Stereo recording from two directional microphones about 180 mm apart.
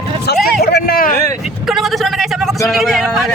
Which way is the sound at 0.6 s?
55° left (ahead or behind).